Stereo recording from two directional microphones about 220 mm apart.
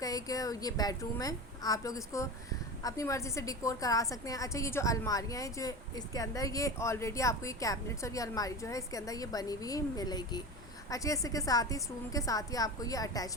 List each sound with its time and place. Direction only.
0.0 s speech: 15° left (ahead or behind)